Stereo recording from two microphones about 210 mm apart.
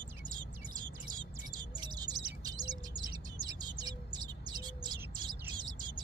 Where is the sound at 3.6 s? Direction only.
20° right (ahead or behind).